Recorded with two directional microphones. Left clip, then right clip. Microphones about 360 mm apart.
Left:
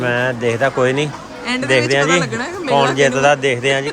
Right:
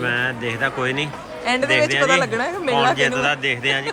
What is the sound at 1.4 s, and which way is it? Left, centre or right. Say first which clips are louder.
Speech: left 2 dB; centre.